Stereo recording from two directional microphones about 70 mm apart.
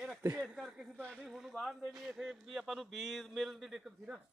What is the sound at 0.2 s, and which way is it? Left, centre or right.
Speech, right.